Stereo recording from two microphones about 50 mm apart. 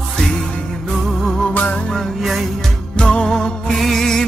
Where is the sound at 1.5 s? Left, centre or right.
Left.